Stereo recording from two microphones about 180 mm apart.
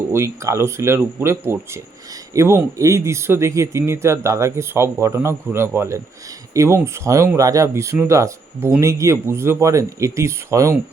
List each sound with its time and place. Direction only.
0.1 s speech: 15° right (ahead or behind)